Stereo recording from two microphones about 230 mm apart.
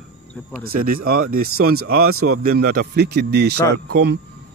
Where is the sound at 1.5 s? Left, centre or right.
Right.